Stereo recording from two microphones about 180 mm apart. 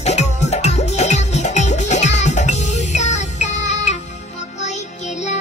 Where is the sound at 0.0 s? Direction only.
40° left (ahead or behind).